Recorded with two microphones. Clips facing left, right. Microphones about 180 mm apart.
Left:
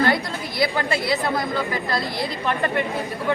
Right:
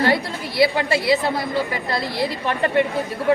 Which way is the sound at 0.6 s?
25° right (ahead or behind).